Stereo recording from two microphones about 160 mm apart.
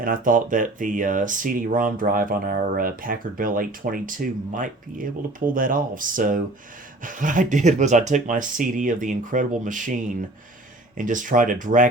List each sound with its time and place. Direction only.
0.0 s speech: 60° right (ahead or behind)